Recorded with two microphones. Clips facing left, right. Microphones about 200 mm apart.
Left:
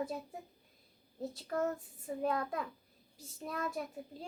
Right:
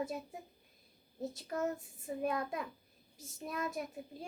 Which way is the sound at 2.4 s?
15° right (ahead or behind).